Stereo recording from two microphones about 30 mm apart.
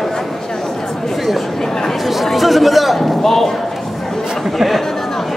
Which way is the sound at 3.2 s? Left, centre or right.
Centre.